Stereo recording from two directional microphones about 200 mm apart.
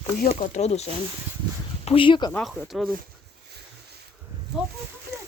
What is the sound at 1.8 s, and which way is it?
Speech, 25° left (ahead or behind).